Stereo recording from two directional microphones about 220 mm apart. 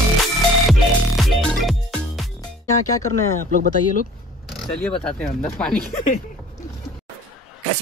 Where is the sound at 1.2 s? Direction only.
Centre (ahead or behind).